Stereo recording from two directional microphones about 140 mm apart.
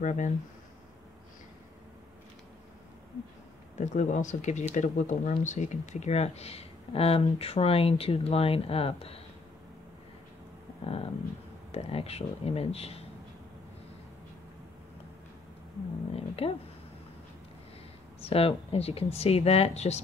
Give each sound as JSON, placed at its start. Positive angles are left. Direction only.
{"t": 0.0, "sound": "speech", "side_deg": 60}
{"t": 3.7, "sound": "speech", "side_deg": 60}
{"t": 10.8, "sound": "speech", "side_deg": 45}
{"t": 16.2, "sound": "speech", "side_deg": 45}
{"t": 18.2, "sound": "speech", "side_deg": 45}